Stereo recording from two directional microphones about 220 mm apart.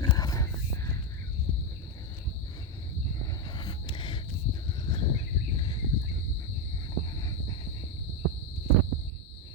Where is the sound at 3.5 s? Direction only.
20° left (ahead or behind).